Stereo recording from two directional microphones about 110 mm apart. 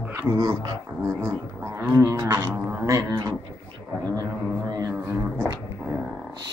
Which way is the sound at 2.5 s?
15° right (ahead or behind).